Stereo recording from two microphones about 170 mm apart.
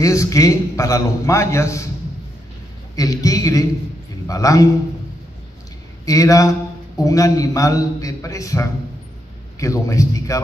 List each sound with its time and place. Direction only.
0.0 s a man's voice: 20° left (ahead or behind)
3.0 s a man's voice: 20° left (ahead or behind)
6.0 s a man's voice: 20° left (ahead or behind)